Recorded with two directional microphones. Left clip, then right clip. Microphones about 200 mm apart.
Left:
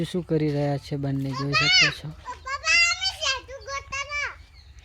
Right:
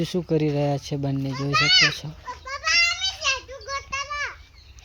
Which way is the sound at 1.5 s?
45° left (ahead or behind).